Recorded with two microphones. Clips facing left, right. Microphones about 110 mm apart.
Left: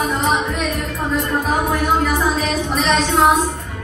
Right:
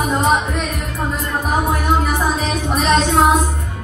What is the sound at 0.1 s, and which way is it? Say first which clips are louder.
Music: right 3 dB; 45° right (ahead or behind).